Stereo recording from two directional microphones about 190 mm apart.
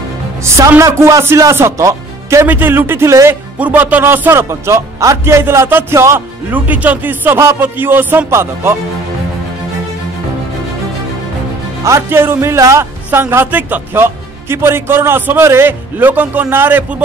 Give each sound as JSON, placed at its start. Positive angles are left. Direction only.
{"t": 0.4, "sound": "a man's voice", "side_deg": -15}
{"t": 11.8, "sound": "a man's voice", "side_deg": -15}